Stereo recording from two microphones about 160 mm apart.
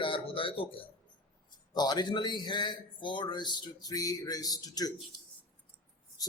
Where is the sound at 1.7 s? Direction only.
25° left (ahead or behind).